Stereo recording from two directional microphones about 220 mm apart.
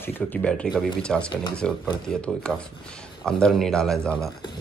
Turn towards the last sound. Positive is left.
turn(degrees=5)  # may be behind; listen again after turning